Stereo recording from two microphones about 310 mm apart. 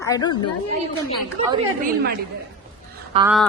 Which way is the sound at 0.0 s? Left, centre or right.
Centre.